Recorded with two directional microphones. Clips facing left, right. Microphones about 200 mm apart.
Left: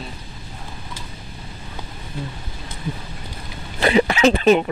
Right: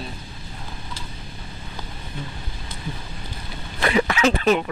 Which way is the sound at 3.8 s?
30° left (ahead or behind).